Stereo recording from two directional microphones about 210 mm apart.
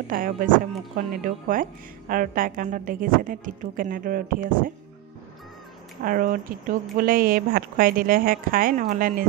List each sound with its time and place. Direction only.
0.1 s speech: 40° right (ahead or behind)
6.0 s speech: 40° right (ahead or behind)